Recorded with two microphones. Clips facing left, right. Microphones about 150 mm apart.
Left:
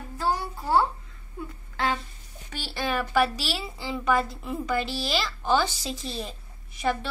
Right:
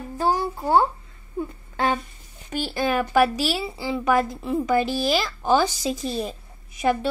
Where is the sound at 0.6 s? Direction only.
30° right (ahead or behind).